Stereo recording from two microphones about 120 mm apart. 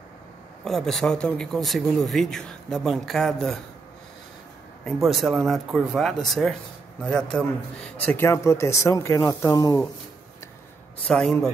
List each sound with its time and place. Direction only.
0.7 s speech: 5° left (ahead or behind)
4.8 s a man's voice: centre (ahead or behind)
8.3 s speech: 25° left (ahead or behind)
11.1 s speech: 5° left (ahead or behind)